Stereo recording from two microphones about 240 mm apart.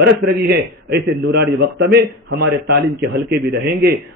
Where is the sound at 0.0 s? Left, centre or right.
Right.